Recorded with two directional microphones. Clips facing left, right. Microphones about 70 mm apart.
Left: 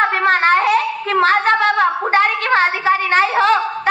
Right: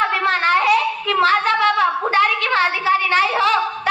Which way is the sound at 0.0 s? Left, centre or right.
Left.